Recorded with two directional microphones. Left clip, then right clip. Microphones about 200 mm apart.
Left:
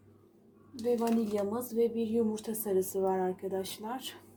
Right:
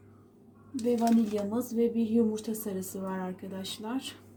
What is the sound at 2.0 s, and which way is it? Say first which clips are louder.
A woman's voice: right 3 dB; 40° left (ahead or behind).